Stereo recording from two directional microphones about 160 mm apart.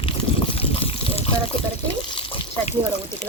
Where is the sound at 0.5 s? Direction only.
35° left (ahead or behind).